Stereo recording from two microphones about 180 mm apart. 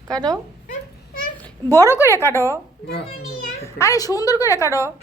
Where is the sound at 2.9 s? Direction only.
60° left (ahead or behind).